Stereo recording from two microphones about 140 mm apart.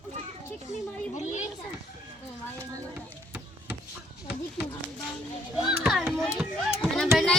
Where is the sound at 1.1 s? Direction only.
60° left (ahead or behind).